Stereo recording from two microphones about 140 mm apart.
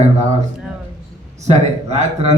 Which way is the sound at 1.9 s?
50° right (ahead or behind).